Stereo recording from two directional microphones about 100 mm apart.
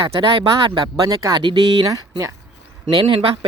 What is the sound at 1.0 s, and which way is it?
Speech, 40° right (ahead or behind).